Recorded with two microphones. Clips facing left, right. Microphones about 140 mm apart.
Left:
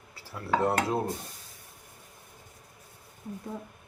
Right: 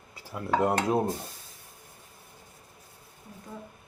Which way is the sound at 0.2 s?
15° right (ahead or behind).